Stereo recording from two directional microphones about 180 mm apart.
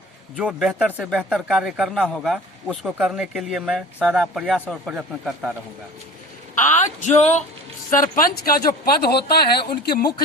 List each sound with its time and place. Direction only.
0.3 s speech: 5° right (ahead or behind)
6.8 s speech: 40° left (ahead or behind); by 10.1 s 60° left (ahead or behind)